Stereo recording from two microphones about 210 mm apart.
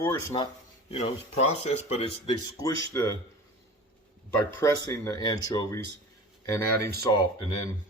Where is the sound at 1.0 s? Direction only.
30° left (ahead or behind); by 3.1 s 15° left (ahead or behind).